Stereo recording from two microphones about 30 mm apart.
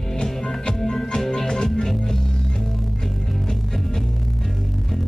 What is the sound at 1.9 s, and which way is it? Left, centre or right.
Music, centre.